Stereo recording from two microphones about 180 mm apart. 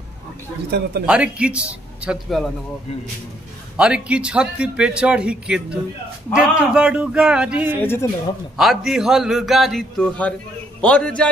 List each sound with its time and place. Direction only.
0.7 s speech: 65° right (ahead or behind)
1.0 s a man's voice: 5° right (ahead or behind)
3.7 s a man's voice: 5° right (ahead or behind)
7.8 s speech: 10° left (ahead or behind)
8.5 s a man's voice: centre (ahead or behind)